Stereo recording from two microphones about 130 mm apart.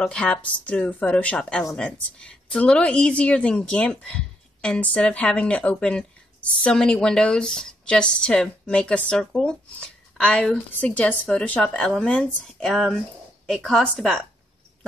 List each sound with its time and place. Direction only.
0.0 s a woman's voice: 5° left (ahead or behind)